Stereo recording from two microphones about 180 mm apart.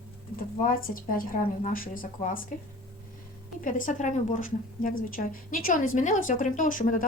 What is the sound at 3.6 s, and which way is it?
A woman's voice, 45° left (ahead or behind).